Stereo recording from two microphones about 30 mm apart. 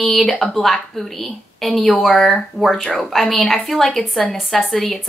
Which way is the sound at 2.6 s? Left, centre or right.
Centre.